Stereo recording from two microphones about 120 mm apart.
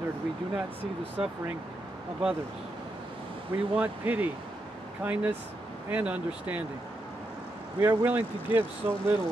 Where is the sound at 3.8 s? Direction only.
15° right (ahead or behind).